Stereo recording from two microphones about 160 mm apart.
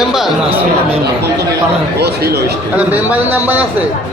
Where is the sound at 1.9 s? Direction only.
90° right.